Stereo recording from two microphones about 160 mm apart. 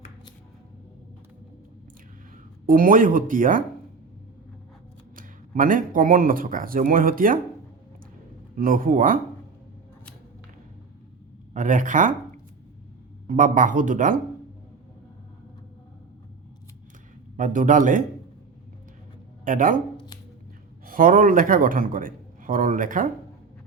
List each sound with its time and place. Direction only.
2.6 s a man's voice: 60° right (ahead or behind)
5.1 s speech: 60° right (ahead or behind)
8.5 s a man's voice: 60° right (ahead or behind)
11.5 s speech: 55° right (ahead or behind)
13.2 s a man's voice: 55° right (ahead or behind)
17.3 s a man's voice: 55° right (ahead or behind)
19.5 s a man's voice: 55° right (ahead or behind)
20.8 s a man's voice: 60° right (ahead or behind)